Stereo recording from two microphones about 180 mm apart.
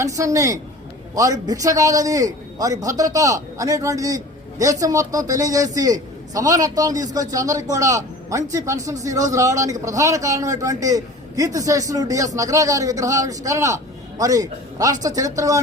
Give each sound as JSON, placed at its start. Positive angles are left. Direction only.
{"t": 0.0, "sound": "a man's voice", "side_deg": -20}